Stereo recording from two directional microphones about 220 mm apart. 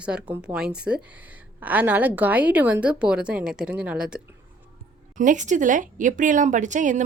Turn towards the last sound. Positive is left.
turn(degrees=-35)  # may be behind; listen again after turning